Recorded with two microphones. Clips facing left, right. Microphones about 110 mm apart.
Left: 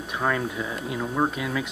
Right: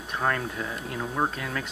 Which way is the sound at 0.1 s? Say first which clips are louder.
Left 2 dB; 5° left (ahead or behind).